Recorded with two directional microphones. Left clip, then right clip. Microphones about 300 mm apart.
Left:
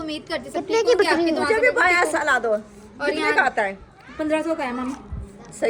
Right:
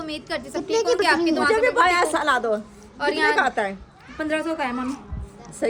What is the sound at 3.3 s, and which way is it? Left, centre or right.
Speech, right.